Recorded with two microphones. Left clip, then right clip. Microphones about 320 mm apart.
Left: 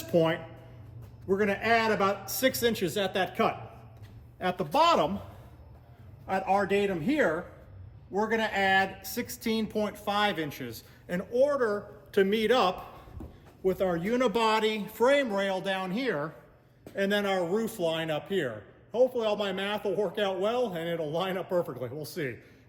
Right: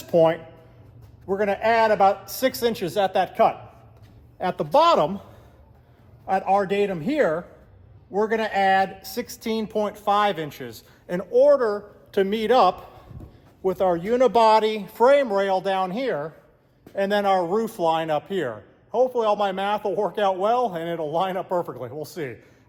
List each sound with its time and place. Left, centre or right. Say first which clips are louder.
0.1 s a man's voice: right 8 dB; centre
6.2 s a man's voice: right 6 dB; centre